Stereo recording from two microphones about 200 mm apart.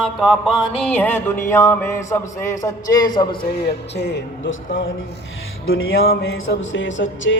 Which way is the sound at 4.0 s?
60° left (ahead or behind).